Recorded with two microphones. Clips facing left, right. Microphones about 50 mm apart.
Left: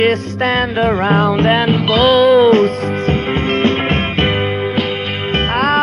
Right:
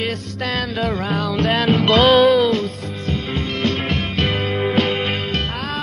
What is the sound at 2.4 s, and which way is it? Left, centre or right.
Music, left.